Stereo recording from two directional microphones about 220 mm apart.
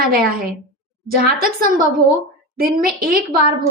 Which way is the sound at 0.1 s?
40° right (ahead or behind).